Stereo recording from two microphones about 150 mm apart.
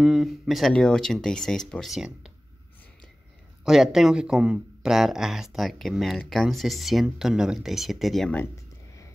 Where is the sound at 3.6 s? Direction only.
5° right (ahead or behind).